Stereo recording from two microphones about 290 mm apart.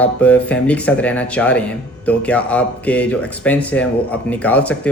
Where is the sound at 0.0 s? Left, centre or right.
Centre.